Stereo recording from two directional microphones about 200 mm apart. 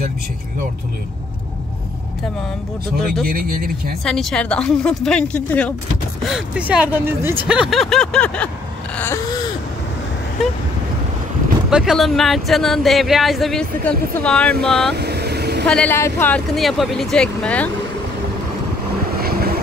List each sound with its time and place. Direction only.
3.3 s speech: 50° right (ahead or behind)
4.0 s speech: centre (ahead or behind)
8.9 s a sound: 10° left (ahead or behind)
11.7 s speech: centre (ahead or behind)
15.0 s vehicle: 55° right (ahead or behind)
15.6 s speech: 5° left (ahead or behind)
19.2 s vehicle: 50° right (ahead or behind)